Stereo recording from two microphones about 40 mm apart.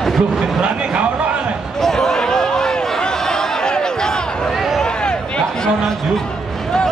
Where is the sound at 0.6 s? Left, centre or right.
Right.